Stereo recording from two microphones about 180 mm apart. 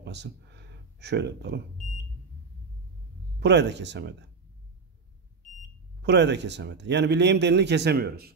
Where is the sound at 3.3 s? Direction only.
70° right (ahead or behind).